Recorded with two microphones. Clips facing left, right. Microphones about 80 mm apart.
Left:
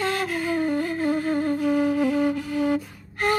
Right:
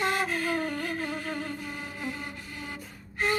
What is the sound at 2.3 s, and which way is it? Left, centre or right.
Music, left.